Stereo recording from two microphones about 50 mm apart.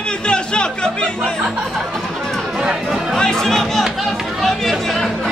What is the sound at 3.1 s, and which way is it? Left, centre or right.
Chatter, centre.